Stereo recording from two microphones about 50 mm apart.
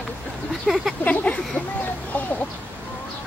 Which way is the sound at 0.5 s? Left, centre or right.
Centre.